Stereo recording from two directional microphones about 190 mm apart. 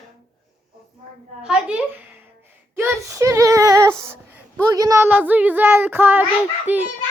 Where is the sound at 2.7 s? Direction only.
10° right (ahead or behind).